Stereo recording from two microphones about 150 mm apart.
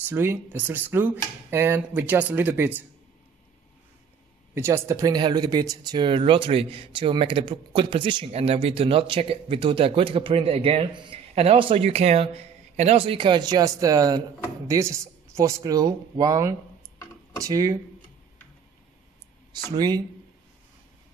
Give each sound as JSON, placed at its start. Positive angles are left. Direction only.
{"t": 0.1, "sound": "speech", "side_deg": -15}
{"t": 4.6, "sound": "speech", "side_deg": -20}
{"t": 19.7, "sound": "speech", "side_deg": -25}